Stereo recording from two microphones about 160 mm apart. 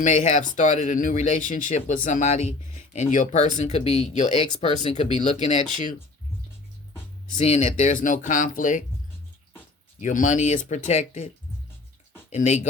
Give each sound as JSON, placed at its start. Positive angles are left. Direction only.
{"t": 0.0, "sound": "speech", "side_deg": 45}
{"t": 5.7, "sound": "speech", "side_deg": 50}
{"t": 7.3, "sound": "speech", "side_deg": 40}
{"t": 10.0, "sound": "speech", "side_deg": 50}
{"t": 12.3, "sound": "speech", "side_deg": 45}